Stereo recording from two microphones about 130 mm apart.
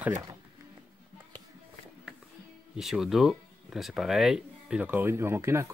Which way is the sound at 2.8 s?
Centre (ahead or behind).